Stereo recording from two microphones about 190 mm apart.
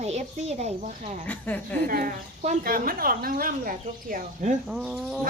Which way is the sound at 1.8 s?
45° right (ahead or behind).